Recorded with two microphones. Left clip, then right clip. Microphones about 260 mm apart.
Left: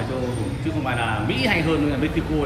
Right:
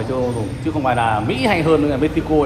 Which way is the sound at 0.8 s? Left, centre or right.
Centre.